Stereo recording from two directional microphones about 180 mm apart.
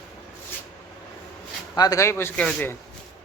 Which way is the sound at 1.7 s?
20° left (ahead or behind).